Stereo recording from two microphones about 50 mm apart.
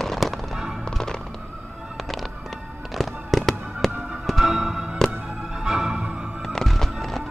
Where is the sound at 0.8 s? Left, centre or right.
Centre.